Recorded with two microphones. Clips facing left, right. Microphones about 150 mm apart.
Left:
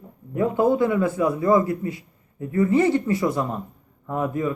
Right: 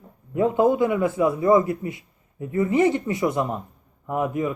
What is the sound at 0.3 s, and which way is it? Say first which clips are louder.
Speech: right 1 dB; 20° right (ahead or behind).